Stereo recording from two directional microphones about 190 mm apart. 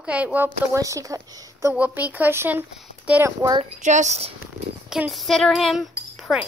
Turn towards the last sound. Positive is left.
turn(degrees=0)  # may be behind; listen again after turning